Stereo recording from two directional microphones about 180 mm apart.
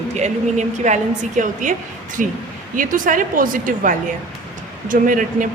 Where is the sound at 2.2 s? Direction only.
Centre (ahead or behind).